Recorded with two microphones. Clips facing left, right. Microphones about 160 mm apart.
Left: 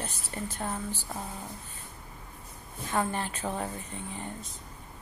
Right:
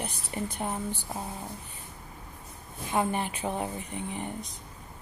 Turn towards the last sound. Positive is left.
turn(degrees=-15)  # may be behind; listen again after turning